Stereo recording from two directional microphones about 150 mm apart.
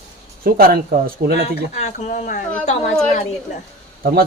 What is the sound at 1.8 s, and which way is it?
Speech, 50° left (ahead or behind).